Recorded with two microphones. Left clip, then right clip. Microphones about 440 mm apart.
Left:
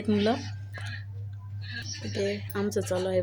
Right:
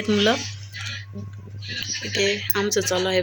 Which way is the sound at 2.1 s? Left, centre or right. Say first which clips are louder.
Right 8 dB; left.